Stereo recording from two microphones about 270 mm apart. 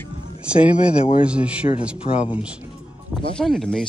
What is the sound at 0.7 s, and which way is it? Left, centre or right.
Speech, centre.